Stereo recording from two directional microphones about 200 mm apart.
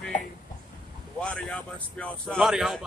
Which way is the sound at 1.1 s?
5° left (ahead or behind).